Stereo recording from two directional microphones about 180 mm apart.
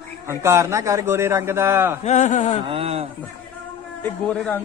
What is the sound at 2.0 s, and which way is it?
Speech, 40° left (ahead or behind).